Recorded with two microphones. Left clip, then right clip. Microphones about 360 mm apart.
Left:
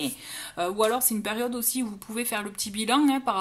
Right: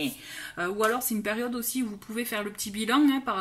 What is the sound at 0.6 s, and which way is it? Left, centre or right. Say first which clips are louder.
Speech: left 2 dB; centre.